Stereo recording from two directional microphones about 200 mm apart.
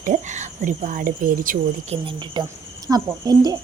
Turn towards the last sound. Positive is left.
turn(degrees=-20)  # may be behind; listen again after turning